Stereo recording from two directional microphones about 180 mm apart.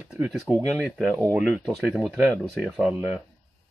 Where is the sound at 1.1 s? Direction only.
15° right (ahead or behind).